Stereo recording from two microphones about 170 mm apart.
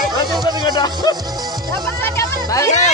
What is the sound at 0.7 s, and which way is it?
Music, 25° left (ahead or behind).